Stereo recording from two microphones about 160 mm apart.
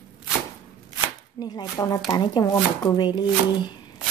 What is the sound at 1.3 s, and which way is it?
Speech, 25° left (ahead or behind).